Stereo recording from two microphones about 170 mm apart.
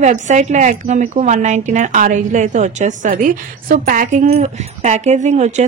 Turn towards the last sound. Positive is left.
turn(degrees=-45)  # may be behind; listen again after turning